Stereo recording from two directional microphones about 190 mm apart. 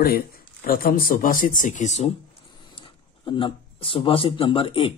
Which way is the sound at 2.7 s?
25° left (ahead or behind).